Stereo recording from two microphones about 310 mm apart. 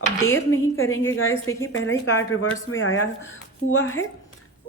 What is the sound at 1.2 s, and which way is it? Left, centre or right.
Speech, centre.